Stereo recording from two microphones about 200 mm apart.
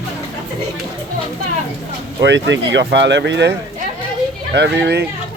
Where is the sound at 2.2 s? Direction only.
60° right (ahead or behind).